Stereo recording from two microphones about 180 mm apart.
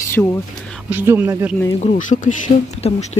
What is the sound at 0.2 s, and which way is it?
Speech, 5° left (ahead or behind).